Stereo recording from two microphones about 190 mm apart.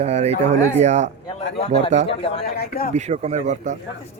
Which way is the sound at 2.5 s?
55° left (ahead or behind).